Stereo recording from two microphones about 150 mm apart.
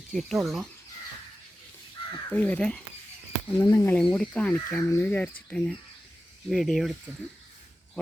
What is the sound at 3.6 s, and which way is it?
Speech, 20° left (ahead or behind).